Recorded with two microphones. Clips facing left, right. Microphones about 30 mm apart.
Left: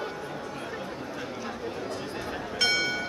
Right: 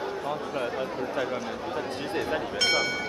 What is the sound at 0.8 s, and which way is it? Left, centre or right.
Speech, right.